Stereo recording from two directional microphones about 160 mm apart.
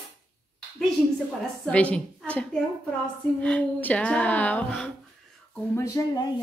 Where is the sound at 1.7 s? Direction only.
5° left (ahead or behind).